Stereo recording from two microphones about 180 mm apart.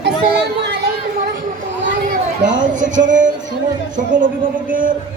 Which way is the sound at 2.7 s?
45° right (ahead or behind).